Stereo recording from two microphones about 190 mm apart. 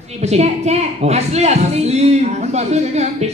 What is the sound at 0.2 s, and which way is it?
A woman's voice, 35° right (ahead or behind).